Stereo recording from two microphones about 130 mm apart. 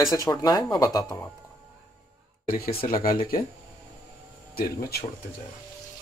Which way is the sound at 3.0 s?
90° left.